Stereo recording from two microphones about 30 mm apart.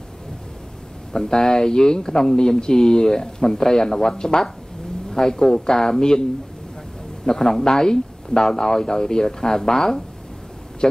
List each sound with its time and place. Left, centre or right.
1.1 s speech: left
5.1 s speech: left
7.2 s speech: centre
10.8 s speech: left